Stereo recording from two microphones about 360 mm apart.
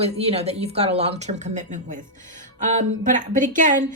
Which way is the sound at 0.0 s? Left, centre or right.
Centre.